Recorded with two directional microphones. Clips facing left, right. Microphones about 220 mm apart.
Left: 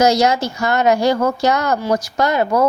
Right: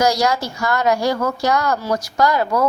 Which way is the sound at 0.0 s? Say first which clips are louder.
Left 3 dB; 25° left (ahead or behind).